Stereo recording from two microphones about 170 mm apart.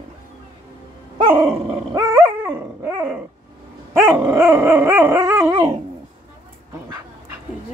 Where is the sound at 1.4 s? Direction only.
15° right (ahead or behind).